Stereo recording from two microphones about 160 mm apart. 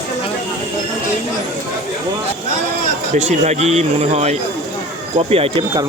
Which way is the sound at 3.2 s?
45° right (ahead or behind).